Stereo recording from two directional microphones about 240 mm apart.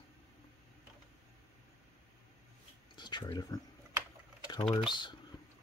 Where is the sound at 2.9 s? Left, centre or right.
Centre.